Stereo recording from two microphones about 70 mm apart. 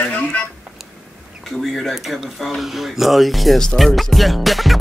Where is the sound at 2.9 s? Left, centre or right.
Centre.